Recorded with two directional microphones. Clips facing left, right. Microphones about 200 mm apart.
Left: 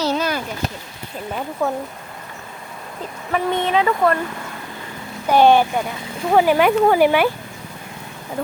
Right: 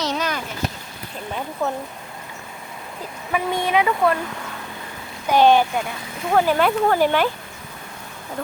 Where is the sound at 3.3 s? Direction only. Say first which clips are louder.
Left 2 dB; 10° right (ahead or behind).